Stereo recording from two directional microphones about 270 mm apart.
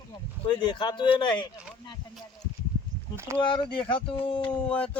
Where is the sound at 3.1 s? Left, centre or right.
Centre.